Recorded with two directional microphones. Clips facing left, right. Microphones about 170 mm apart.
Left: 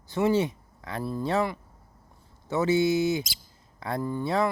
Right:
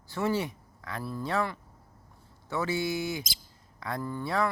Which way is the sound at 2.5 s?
20° left (ahead or behind).